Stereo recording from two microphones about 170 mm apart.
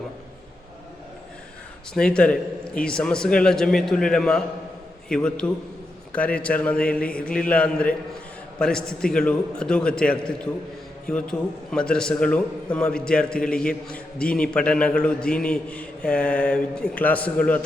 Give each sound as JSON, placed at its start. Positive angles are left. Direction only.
{"t": 1.9, "sound": "a man's voice", "side_deg": 5}